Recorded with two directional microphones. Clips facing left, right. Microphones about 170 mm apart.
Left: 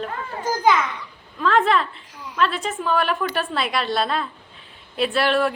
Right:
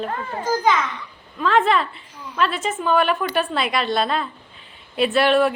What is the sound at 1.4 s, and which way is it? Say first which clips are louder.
A woman's voice: right 1 dB; centre (ahead or behind).